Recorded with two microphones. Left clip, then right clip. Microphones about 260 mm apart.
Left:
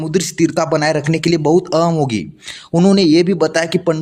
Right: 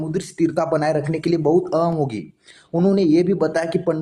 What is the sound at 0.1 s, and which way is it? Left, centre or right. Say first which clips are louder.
Speech: left 6 dB; left.